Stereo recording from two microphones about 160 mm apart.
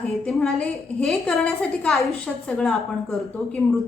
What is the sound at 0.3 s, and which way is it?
A woman's voice, 5° left (ahead or behind).